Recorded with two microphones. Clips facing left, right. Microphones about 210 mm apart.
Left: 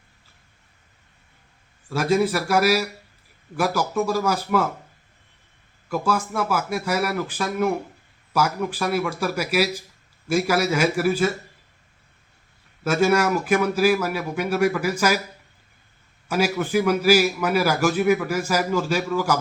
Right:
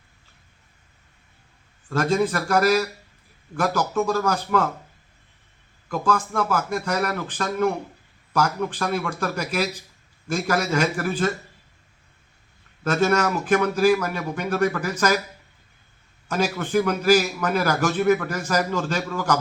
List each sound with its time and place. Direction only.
1.9 s a man's voice: 5° left (ahead or behind)
5.9 s a man's voice: 10° left (ahead or behind)
12.8 s a man's voice: 10° left (ahead or behind)
16.3 s a man's voice: 10° left (ahead or behind)